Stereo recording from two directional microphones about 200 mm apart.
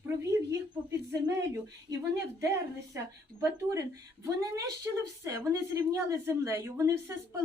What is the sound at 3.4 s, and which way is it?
A woman's voice, 15° right (ahead or behind).